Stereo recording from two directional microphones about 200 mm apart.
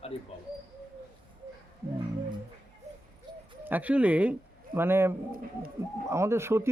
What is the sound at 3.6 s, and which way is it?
Speech, 10° right (ahead or behind).